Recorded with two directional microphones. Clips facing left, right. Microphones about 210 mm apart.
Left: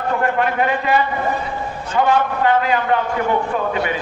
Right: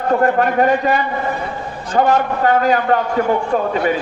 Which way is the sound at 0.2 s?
40° right (ahead or behind).